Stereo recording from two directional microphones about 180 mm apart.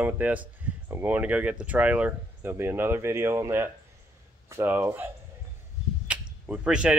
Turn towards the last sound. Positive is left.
turn(degrees=-5)  # may be behind; listen again after turning